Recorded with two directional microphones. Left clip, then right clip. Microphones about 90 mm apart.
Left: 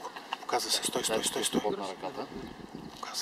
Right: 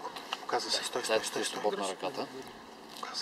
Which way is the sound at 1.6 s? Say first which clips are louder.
Right 1 dB; 20° right (ahead or behind).